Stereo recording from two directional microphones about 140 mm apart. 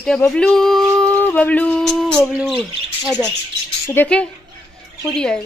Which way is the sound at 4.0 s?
10° left (ahead or behind).